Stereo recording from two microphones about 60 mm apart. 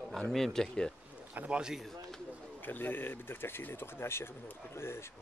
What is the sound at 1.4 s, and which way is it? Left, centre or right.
Speech, centre.